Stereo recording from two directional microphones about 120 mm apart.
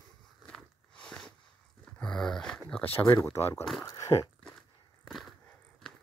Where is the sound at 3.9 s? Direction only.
30° left (ahead or behind).